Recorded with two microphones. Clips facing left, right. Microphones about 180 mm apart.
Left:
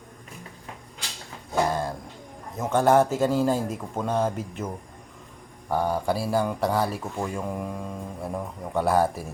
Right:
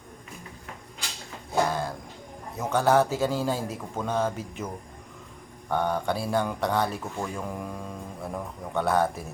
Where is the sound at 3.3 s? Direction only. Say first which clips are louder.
Left 5 dB; 5° left (ahead or behind).